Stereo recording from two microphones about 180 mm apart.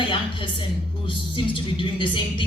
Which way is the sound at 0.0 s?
30° left (ahead or behind).